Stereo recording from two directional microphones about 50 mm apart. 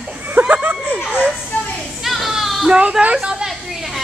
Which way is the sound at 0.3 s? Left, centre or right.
Right.